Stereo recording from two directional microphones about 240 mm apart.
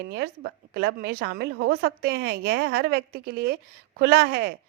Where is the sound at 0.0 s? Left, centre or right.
Right.